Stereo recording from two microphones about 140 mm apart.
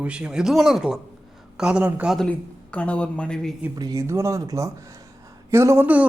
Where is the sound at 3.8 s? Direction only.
25° right (ahead or behind).